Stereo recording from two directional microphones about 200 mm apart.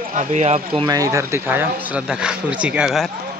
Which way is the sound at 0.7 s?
20° right (ahead or behind).